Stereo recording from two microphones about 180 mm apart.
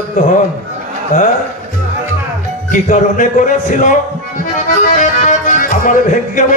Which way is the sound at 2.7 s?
45° left (ahead or behind).